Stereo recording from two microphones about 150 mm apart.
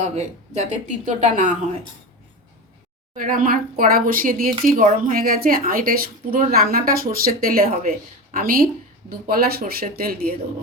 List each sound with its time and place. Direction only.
0.0 s speech: 50° right (ahead or behind)
3.2 s speech: 65° right (ahead or behind)